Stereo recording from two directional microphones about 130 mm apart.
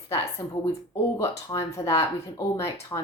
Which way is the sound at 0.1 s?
20° left (ahead or behind).